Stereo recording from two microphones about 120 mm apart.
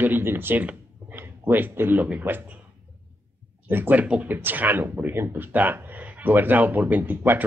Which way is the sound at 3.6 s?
15° right (ahead or behind).